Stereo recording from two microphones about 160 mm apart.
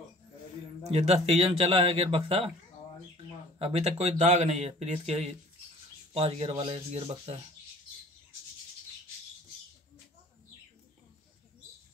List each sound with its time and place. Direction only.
0.8 s speech: 40° right (ahead or behind)
3.5 s speech: 40° right (ahead or behind)